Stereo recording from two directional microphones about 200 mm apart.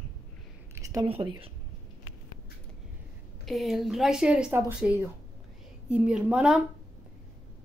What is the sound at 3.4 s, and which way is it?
Speech, centre (ahead or behind).